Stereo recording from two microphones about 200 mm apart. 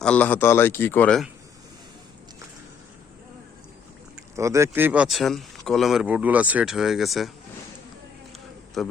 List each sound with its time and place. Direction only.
0.0 s a man's voice: 5° left (ahead or behind)
4.4 s speech: 15° right (ahead or behind)
8.8 s speech: centre (ahead or behind)